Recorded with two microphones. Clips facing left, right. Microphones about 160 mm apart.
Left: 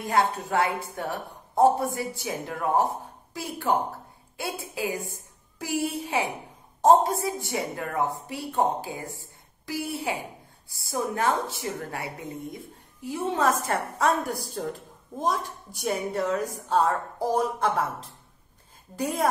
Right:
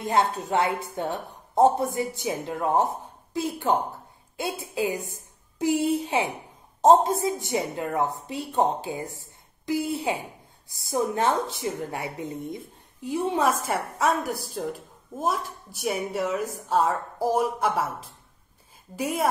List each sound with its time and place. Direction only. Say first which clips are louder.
0.0 s a woman's voice: right 1 dB; 25° right (ahead or behind); by 17.8 s 5° right (ahead or behind)
18.9 s a woman's voice: right 1 dB; 5° right (ahead or behind)